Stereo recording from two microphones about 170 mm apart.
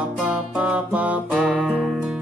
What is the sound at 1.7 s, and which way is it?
Music, 5° left (ahead or behind).